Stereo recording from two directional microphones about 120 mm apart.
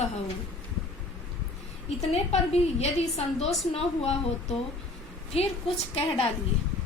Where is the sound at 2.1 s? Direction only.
60° left (ahead or behind).